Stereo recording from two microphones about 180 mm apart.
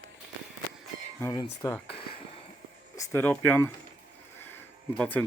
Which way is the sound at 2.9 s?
15° left (ahead or behind).